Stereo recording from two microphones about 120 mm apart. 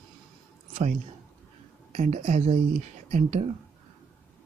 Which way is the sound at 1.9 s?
80° right.